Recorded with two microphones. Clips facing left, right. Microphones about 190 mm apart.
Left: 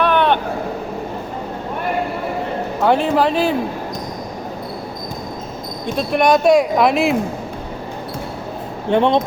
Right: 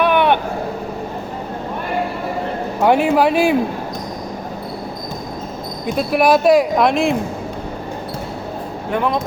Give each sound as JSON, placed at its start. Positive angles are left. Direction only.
{"t": 0.0, "sound": "vehicle", "side_deg": -10}
{"t": 2.8, "sound": "a man's voice", "side_deg": -10}
{"t": 5.8, "sound": "speech", "side_deg": -5}
{"t": 8.9, "sound": "speech", "side_deg": 30}